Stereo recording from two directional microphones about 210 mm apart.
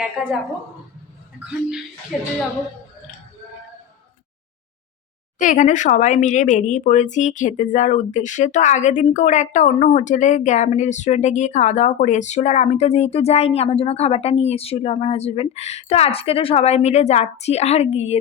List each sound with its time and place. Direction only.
2.1 s speech: centre (ahead or behind)
5.4 s speech: 35° left (ahead or behind)